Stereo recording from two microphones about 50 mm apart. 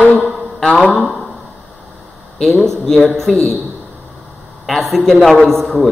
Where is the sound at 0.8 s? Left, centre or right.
Centre.